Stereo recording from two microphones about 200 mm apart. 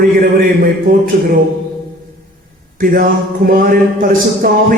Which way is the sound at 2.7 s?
45° right (ahead or behind).